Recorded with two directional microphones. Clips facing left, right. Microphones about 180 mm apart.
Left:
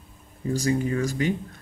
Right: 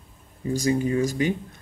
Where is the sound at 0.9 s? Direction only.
20° right (ahead or behind).